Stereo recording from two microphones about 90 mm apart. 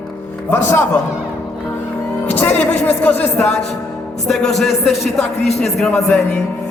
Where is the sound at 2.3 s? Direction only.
20° left (ahead or behind).